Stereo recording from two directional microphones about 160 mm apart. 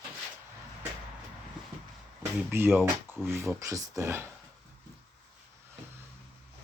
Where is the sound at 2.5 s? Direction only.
15° right (ahead or behind).